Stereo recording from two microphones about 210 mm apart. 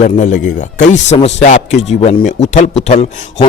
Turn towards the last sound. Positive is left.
turn(degrees=35)  # may be behind; listen again after turning